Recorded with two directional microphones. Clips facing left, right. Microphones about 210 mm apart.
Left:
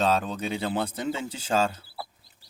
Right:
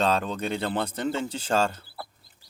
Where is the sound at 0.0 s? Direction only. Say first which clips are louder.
Even; 5° left (ahead or behind).